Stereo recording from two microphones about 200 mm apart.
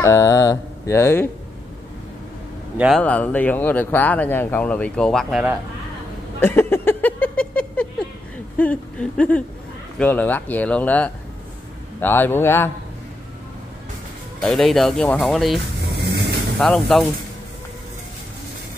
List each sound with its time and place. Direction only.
0.0 s mantra: 15° left (ahead or behind)
2.8 s speech: 5° left (ahead or behind)
6.4 s a sound: 10° left (ahead or behind)
8.5 s speech: 5° left (ahead or behind)
14.4 s speech: 5° left (ahead or behind)
16.0 s vehicle: 55° right (ahead or behind)
16.5 s speech: centre (ahead or behind)